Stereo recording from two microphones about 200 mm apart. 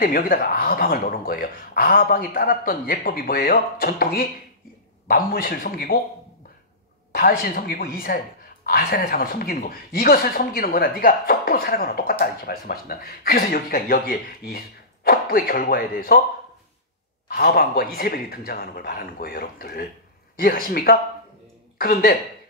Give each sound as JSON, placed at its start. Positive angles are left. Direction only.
{"t": 0.0, "sound": "speech", "side_deg": 45}
{"t": 7.1, "sound": "speech", "side_deg": 45}
{"t": 17.3, "sound": "speech", "side_deg": 50}